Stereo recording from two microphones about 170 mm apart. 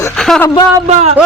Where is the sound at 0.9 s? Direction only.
40° right (ahead or behind).